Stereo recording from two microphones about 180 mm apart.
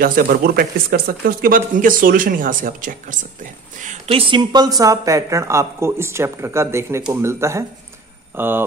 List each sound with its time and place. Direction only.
0.0 s speech: 50° right (ahead or behind); by 8.6 s 10° right (ahead or behind)